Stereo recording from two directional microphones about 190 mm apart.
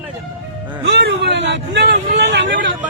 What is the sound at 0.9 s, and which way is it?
Speech, 65° right (ahead or behind).